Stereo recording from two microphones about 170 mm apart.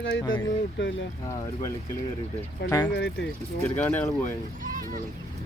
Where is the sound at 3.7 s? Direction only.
10° left (ahead or behind).